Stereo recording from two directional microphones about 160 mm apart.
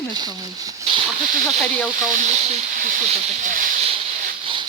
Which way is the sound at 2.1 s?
50° right (ahead or behind).